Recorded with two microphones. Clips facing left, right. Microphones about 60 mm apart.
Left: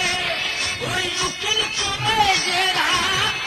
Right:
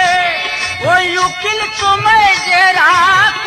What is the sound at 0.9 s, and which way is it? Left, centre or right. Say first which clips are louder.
Music: right 16 dB; right.